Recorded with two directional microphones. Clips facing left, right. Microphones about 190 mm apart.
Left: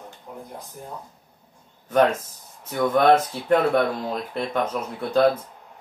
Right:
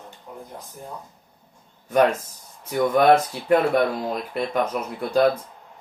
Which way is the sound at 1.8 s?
10° right (ahead or behind).